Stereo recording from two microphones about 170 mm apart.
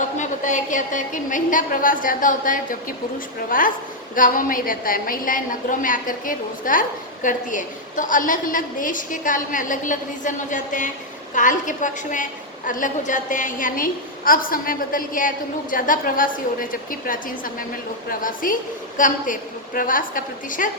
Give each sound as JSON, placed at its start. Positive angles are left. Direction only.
{"t": 0.2, "sound": "a woman's voice", "side_deg": 45}